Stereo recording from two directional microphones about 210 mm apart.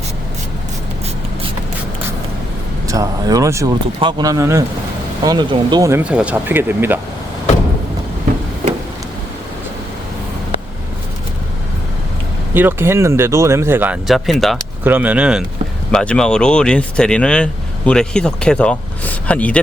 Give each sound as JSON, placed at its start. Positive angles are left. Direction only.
{"t": 2.8, "sound": "speech", "side_deg": -15}
{"t": 12.5, "sound": "speech", "side_deg": -10}